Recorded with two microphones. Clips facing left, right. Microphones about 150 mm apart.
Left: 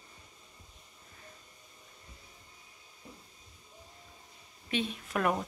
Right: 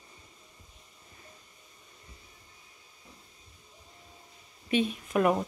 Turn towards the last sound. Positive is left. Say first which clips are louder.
# right 5 dB
turn(degrees=-10)  # may be behind; listen again after turning